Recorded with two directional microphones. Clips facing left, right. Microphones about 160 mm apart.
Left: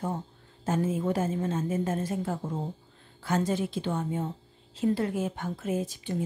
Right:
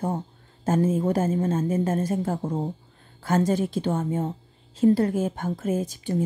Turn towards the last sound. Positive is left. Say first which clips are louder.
# right 5 dB
turn(degrees=-40)  # may be behind; listen again after turning